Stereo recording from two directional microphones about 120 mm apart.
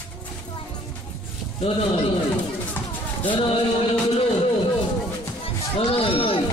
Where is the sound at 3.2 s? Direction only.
50° left (ahead or behind).